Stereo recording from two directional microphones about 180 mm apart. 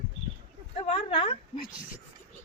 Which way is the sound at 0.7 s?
30° left (ahead or behind).